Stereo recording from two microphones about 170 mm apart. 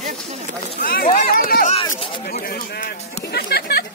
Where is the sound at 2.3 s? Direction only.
65° left (ahead or behind).